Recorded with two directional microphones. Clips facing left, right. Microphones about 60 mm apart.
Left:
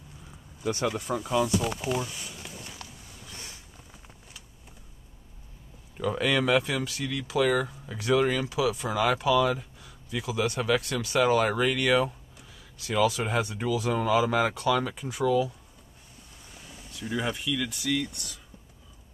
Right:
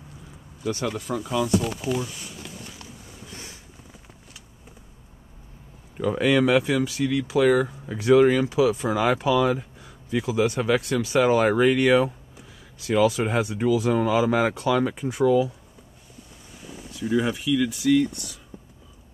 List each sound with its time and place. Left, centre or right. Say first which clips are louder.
0.8 s speech: right 1 dB; centre
2.6 s a sound: right 2 dB; right
5.9 s speech: right 5 dB; centre
16.6 s speech: right 8 dB; centre